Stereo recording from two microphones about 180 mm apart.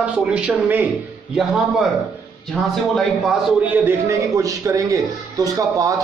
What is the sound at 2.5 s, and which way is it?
A man's voice, centre (ahead or behind).